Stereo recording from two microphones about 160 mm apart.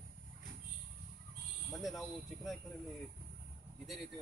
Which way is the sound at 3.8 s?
Centre (ahead or behind).